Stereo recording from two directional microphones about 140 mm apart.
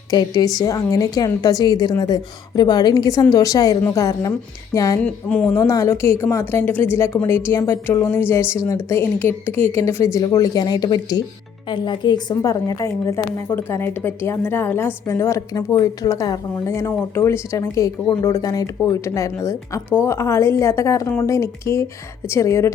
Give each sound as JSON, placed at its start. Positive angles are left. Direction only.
{"t": 0.1, "sound": "a woman's voice", "side_deg": 30}
{"t": 5.0, "sound": "a woman's voice", "side_deg": 10}
{"t": 5.5, "sound": "a woman's voice", "side_deg": 20}